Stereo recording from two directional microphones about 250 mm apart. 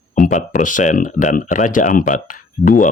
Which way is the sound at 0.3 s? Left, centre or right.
Left.